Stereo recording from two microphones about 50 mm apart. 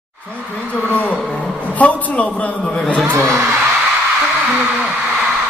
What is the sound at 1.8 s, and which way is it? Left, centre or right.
Speech, left.